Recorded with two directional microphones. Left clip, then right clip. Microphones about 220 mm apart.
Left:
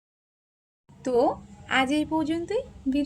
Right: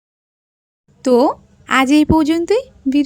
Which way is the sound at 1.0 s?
45° right (ahead or behind).